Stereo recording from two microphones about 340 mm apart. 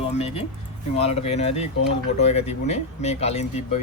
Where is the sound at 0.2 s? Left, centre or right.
Centre.